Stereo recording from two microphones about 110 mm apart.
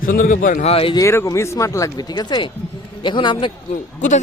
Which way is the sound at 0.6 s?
60° left (ahead or behind).